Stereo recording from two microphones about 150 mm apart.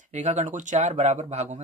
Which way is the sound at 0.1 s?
50° right (ahead or behind).